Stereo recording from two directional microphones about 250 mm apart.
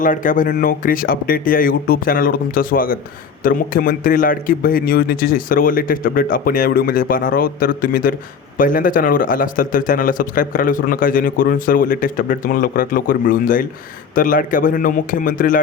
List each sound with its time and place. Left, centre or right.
0.0 s a man's voice: left